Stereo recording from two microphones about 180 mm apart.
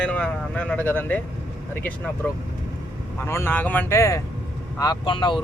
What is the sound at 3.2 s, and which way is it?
Speech, 15° left (ahead or behind).